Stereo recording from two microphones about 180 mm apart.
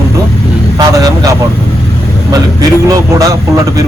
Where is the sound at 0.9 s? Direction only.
20° right (ahead or behind).